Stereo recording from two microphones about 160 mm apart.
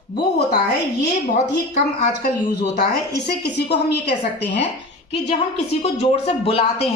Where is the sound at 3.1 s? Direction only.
90° left.